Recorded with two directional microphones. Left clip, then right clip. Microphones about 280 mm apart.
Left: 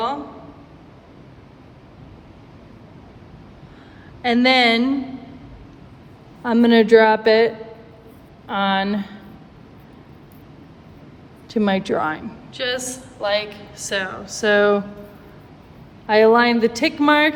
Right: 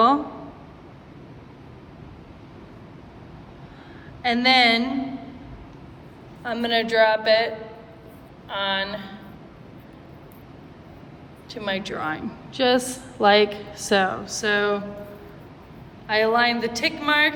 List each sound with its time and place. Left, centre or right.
4.2 s a woman's voice: centre
6.4 s a woman's voice: centre
11.4 s a woman's voice: centre
12.0 s a woman's voice: centre
14.3 s a woman's voice: centre
16.0 s a woman's voice: centre